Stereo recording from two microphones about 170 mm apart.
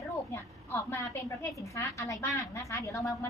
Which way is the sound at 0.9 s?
15° left (ahead or behind).